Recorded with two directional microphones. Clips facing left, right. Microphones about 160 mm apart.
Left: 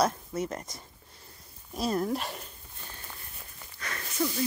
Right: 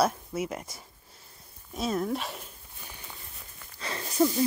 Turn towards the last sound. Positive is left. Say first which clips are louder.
# right 6 dB
turn(degrees=-30)  # may be behind; listen again after turning